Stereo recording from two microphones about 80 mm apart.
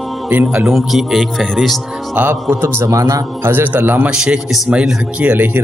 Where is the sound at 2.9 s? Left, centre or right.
Right.